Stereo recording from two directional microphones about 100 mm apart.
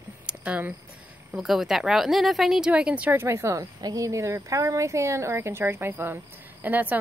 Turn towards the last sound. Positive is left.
turn(degrees=-15)  # may be behind; listen again after turning